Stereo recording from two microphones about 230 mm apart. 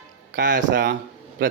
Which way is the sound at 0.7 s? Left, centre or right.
Right.